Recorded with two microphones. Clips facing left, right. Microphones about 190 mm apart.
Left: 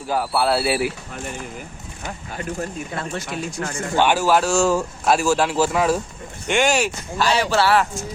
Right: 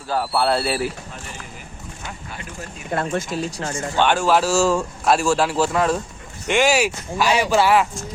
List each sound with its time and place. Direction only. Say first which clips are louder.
0.1 s speech: even; 5° left (ahead or behind)
2.0 s speech: left 7 dB; 45° left (ahead or behind)
2.9 s speech: right 5 dB; 50° right (ahead or behind)
3.3 s speech: right 2 dB; 30° right (ahead or behind)
3.9 s speech: left 1 dB; 5° left (ahead or behind); by 7.9 s 15° right (ahead or behind)